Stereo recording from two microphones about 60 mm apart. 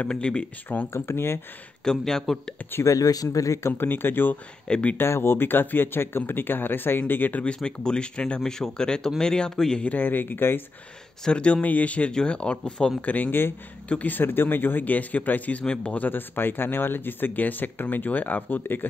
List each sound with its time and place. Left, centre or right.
0.0 s speech: centre
0.8 s speech: left
1.9 s speech: centre
2.8 s speech: left
3.7 s speech: left
4.6 s speech: centre
4.9 s speech: left
7.4 s speech: centre
8.4 s speech: centre
9.9 s speech: left
11.2 s speech: centre
13.0 s a man's voice: left
15.6 s speech: centre